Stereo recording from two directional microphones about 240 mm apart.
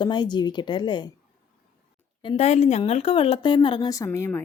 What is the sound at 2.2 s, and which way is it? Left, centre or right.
A woman's voice, left.